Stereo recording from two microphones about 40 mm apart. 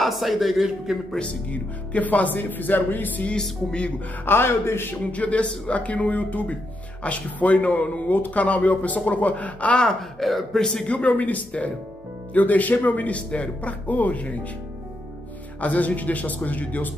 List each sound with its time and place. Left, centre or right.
0.0 s a man's voice: centre
1.2 s speech: left
4.2 s a man's voice: left
5.1 s speech: left
10.1 s a man's voice: centre
10.6 s speech: centre
10.9 s speech: left
15.6 s speech: left